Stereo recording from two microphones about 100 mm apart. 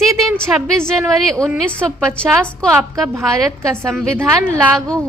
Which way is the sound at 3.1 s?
25° right (ahead or behind).